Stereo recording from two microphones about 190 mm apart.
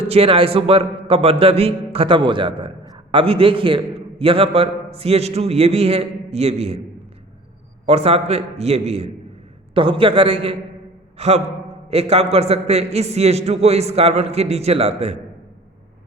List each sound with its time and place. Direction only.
0.0 s a man's voice: 30° right (ahead or behind)
7.9 s a man's voice: 30° right (ahead or behind)